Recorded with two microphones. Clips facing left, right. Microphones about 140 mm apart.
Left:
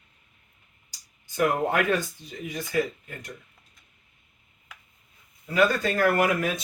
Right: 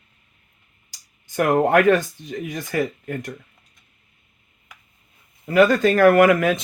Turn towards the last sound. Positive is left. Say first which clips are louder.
# right 9 dB
turn(degrees=-90)